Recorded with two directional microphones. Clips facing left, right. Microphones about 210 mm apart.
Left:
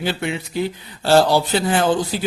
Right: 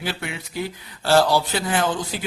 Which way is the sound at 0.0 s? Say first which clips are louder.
Left 6 dB; 25° left (ahead or behind).